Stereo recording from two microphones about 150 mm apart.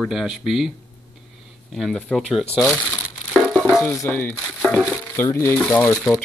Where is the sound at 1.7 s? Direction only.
5° left (ahead or behind).